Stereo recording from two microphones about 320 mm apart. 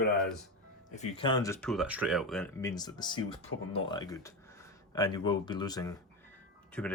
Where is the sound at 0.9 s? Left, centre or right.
Centre.